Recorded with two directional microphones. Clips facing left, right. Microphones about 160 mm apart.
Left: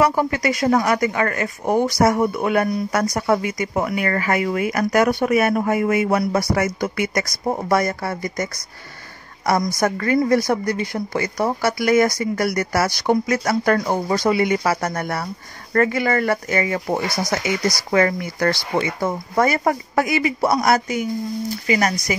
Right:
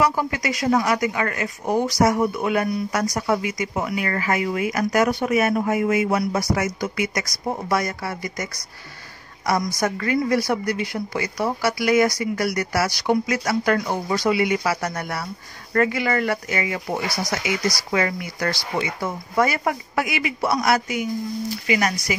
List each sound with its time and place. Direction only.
0.0 s speech: 55° left (ahead or behind)
17.2 s speech: 20° left (ahead or behind)
17.9 s speech: 50° left (ahead or behind)